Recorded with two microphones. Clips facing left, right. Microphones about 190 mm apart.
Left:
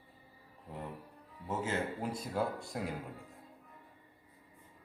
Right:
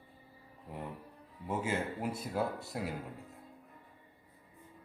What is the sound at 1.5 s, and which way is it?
Speech, 10° right (ahead or behind).